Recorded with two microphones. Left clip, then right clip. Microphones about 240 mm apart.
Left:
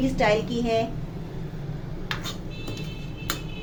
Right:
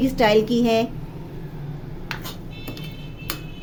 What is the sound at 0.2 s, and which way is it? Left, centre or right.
Speech, right.